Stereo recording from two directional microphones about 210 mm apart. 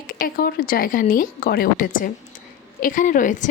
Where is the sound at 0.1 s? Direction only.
45° left (ahead or behind).